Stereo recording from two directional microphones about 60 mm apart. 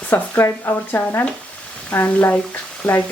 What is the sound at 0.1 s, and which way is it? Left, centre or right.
Speech, left.